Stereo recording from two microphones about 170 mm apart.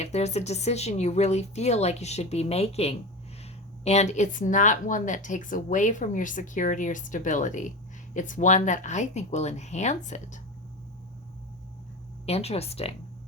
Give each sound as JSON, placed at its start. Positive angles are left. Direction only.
{"t": 0.0, "sound": "a woman's voice", "side_deg": 40}
{"t": 12.2, "sound": "speech", "side_deg": 40}